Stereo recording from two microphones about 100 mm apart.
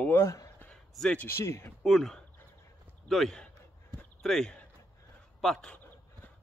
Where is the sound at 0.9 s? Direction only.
5° left (ahead or behind).